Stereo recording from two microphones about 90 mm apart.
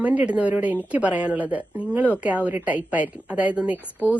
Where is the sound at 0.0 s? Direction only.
15° right (ahead or behind).